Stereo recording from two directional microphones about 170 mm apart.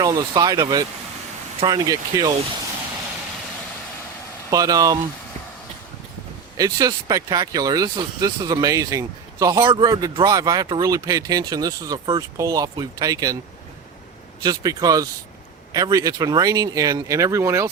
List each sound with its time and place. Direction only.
0.0 s speech: 20° right (ahead or behind)
4.5 s speech: 20° right (ahead or behind)
6.6 s speech: 20° right (ahead or behind)
14.4 s speech: 20° right (ahead or behind)